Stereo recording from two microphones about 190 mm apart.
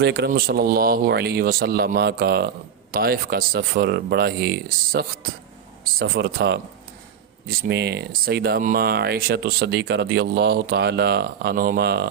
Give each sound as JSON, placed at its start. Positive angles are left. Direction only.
{"t": 0.0, "sound": "speech", "side_deg": -60}